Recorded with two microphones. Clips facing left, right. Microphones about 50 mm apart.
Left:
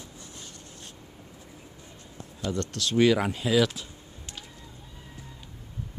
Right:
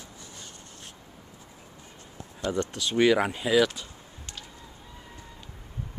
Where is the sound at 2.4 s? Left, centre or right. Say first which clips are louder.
Right 2 dB; centre.